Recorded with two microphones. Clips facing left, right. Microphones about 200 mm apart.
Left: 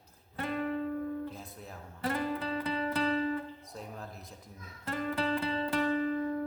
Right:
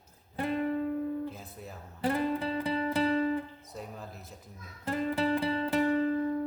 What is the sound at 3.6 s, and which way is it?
Speech, centre (ahead or behind).